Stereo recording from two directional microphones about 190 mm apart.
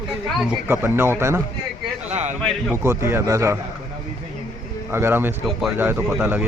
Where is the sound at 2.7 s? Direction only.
15° right (ahead or behind).